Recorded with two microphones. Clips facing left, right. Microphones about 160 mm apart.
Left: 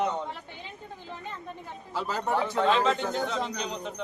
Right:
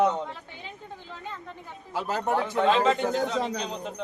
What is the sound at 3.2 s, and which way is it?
Speech, 40° right (ahead or behind).